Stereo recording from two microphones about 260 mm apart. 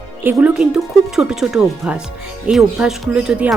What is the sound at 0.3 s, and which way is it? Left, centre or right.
Speech, centre.